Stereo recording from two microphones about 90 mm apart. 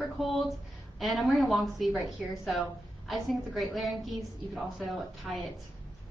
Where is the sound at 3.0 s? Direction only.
Centre (ahead or behind).